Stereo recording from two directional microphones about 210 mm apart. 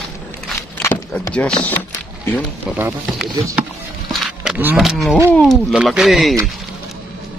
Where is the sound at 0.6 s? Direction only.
10° left (ahead or behind).